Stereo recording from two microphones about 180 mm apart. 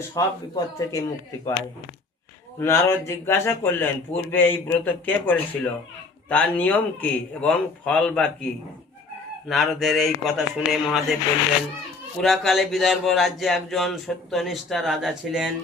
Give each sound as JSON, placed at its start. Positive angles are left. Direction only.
{"t": 0.1, "sound": "speech", "side_deg": 20}
{"t": 2.6, "sound": "speech", "side_deg": 15}
{"t": 9.5, "sound": "speech", "side_deg": 0}
{"t": 12.2, "sound": "speech", "side_deg": 0}